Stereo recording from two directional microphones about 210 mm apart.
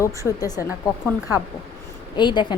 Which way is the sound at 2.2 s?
20° left (ahead or behind).